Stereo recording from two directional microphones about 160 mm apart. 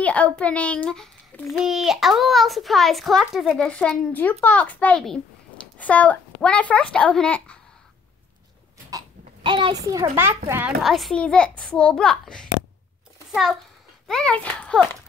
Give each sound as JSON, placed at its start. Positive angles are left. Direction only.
{"t": 0.0, "sound": "a child's voice", "side_deg": 10}
{"t": 8.9, "sound": "a sound", "side_deg": -30}
{"t": 10.1, "sound": "a child's voice", "side_deg": -15}
{"t": 10.8, "sound": "a child's voice", "side_deg": 0}